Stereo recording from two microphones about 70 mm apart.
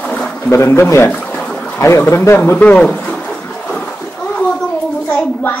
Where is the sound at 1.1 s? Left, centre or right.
Centre.